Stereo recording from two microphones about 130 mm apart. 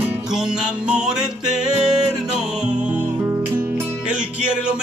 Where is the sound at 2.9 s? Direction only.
15° right (ahead or behind).